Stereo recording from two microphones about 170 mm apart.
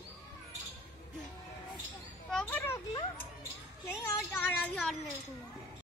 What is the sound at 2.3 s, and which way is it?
Children playing, 5° left (ahead or behind).